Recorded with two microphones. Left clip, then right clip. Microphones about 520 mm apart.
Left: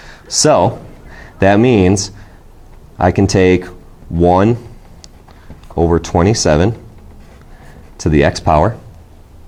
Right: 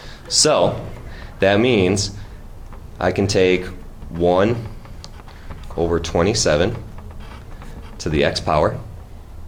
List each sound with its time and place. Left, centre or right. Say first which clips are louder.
0.0 s a sound: left 4 dB; left
1.1 s speech: left 5 dB; left
5.7 s speech: left 6 dB; left
7.9 s speech: left 6 dB; left